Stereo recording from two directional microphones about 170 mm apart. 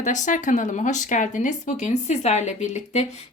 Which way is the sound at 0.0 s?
50° left (ahead or behind).